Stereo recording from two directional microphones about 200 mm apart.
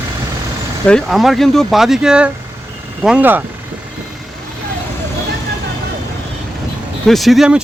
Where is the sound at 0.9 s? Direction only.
Centre (ahead or behind).